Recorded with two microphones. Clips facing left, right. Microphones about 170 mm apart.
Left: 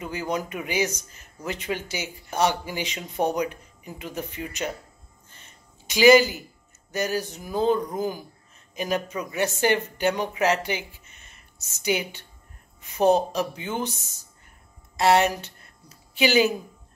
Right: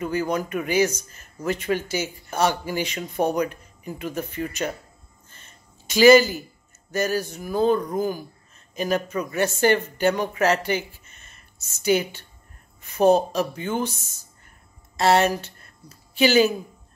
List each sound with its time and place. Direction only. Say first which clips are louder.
0.0 s a man's voice: right 4 dB; 15° left (ahead or behind)
5.3 s a sound: right 1 dB; 15° left (ahead or behind)
6.9 s a man's voice: right 3 dB; 15° left (ahead or behind)
15.0 s speech: right 1 dB; 15° left (ahead or behind)